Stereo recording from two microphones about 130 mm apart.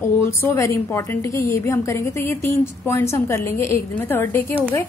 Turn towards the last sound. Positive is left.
turn(degrees=15)  # may be behind; listen again after turning